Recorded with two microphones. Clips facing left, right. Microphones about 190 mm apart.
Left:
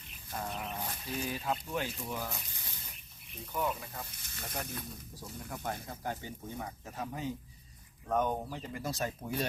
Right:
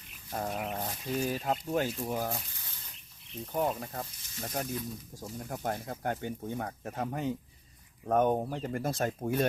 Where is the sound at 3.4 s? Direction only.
45° right (ahead or behind).